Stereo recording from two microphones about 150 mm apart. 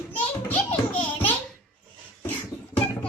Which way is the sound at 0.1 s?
10° left (ahead or behind).